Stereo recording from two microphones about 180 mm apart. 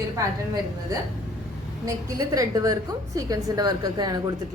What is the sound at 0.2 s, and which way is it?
A woman's voice, 20° right (ahead or behind).